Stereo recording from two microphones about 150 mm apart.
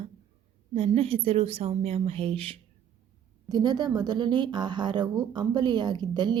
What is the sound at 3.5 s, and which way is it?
Speech, 25° right (ahead or behind).